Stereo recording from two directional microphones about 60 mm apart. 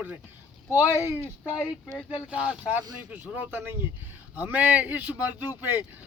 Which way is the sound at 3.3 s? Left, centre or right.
Right.